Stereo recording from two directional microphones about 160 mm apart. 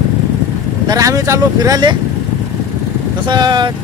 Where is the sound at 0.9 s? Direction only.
20° right (ahead or behind).